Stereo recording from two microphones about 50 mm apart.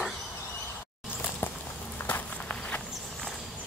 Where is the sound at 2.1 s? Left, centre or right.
Left.